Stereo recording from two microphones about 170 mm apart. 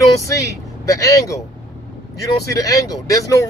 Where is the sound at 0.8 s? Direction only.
20° left (ahead or behind).